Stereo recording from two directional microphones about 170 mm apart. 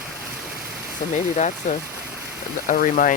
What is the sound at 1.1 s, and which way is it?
Speech, 45° left (ahead or behind).